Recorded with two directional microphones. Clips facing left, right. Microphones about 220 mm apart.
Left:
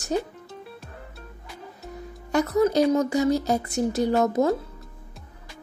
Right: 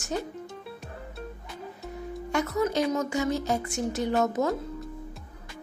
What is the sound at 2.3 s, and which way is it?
A woman's voice, 35° left (ahead or behind).